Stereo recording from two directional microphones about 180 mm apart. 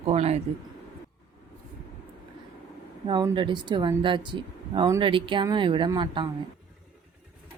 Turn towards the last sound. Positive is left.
turn(degrees=-25)  # may be behind; listen again after turning